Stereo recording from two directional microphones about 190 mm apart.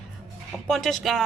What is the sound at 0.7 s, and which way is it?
Speech, centre (ahead or behind).